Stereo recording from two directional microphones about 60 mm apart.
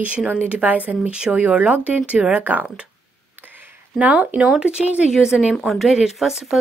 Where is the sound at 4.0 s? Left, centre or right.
Right.